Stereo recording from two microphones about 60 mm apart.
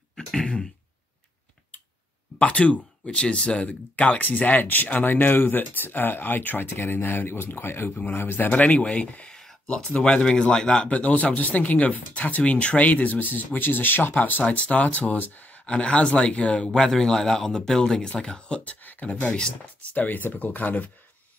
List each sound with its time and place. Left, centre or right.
0.1 s throat clearing: centre
2.3 s speech: left
8.5 s speech: left
10.9 s speech: left
18.6 s speech: left